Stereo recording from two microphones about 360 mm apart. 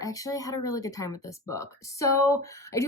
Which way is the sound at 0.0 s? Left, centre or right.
Centre.